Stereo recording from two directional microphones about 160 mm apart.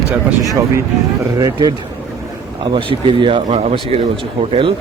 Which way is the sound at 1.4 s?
25° right (ahead or behind).